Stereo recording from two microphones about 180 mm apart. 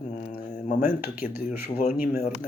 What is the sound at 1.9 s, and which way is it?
Speech, 55° left (ahead or behind).